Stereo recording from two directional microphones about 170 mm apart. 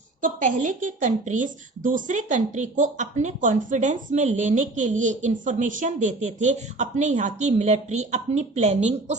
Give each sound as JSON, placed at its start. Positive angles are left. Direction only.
{"t": 0.2, "sound": "speech", "side_deg": -50}